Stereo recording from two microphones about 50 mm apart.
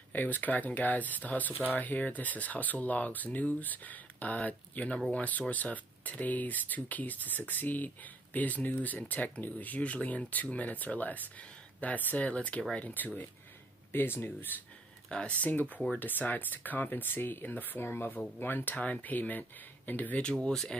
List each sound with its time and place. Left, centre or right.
0.1 s speech: left
13.9 s speech: left
15.0 s speech: left
20.4 s speech: centre